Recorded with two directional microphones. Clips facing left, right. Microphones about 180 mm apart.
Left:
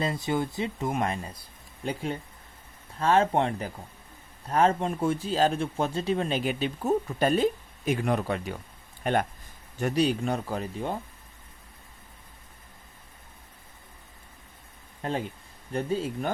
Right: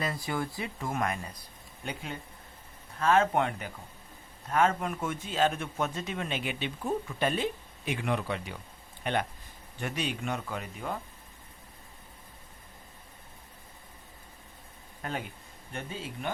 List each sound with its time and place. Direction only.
0.0 s a man's voice: 25° left (ahead or behind)
15.0 s speech: 30° left (ahead or behind)
15.7 s a man's voice: 40° left (ahead or behind)